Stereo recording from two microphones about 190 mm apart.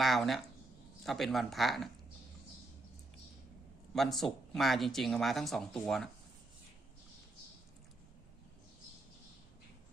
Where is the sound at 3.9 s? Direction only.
Centre (ahead or behind).